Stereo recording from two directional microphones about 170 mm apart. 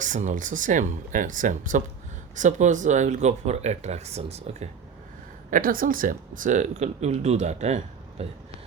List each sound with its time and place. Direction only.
0.0 s speech: 45° right (ahead or behind)
5.5 s speech: 55° right (ahead or behind); by 8.3 s 35° right (ahead or behind)